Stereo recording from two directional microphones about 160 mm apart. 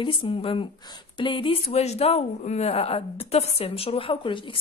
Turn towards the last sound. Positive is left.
turn(degrees=35)  # may be behind; listen again after turning